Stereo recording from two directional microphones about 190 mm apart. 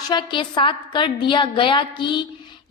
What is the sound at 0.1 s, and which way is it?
A woman's voice, 25° left (ahead or behind).